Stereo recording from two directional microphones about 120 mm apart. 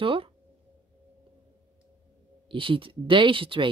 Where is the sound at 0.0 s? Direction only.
45° right (ahead or behind).